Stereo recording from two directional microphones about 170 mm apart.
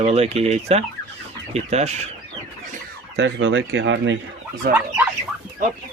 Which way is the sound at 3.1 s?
90° right.